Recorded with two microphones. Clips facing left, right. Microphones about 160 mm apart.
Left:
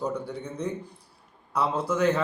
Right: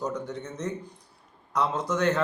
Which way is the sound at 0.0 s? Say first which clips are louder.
Left 1 dB; 10° left (ahead or behind).